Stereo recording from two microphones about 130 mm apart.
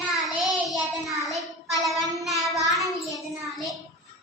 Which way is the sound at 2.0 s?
25° right (ahead or behind).